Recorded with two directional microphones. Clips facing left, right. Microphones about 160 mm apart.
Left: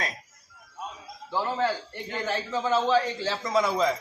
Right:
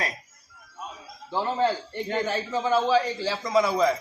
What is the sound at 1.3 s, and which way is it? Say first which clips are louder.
A man's voice: right 2 dB; 20° right (ahead or behind).